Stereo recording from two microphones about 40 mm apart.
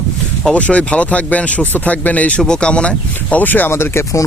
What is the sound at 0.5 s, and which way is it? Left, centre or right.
Speech, left.